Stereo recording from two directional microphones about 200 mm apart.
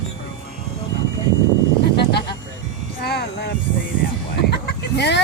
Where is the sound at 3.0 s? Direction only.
55° left (ahead or behind).